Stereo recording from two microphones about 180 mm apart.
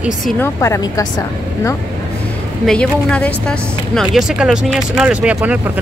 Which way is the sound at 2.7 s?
5° left (ahead or behind).